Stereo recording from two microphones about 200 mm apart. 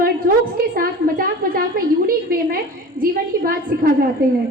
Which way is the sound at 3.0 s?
45° right (ahead or behind).